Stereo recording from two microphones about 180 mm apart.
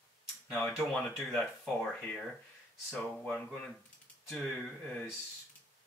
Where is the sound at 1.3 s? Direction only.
5° left (ahead or behind).